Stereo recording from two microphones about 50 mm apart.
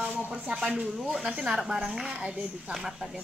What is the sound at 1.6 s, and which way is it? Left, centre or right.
A woman's voice, centre.